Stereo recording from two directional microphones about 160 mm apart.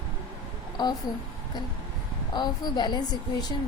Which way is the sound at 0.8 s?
25° left (ahead or behind).